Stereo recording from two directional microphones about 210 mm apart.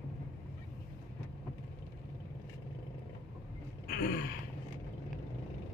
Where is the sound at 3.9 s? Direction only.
45° left (ahead or behind).